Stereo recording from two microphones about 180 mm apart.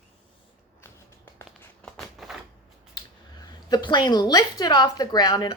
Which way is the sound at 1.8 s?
Centre (ahead or behind).